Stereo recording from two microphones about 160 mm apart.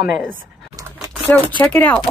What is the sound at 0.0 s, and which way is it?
Speech, 10° right (ahead or behind).